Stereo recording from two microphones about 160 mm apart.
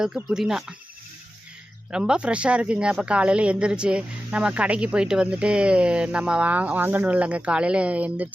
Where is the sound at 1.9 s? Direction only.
5° right (ahead or behind).